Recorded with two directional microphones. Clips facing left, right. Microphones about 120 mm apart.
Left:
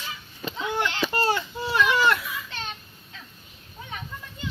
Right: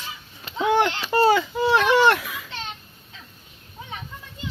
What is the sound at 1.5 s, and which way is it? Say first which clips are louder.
Baby cry: right 5 dB; 90° right.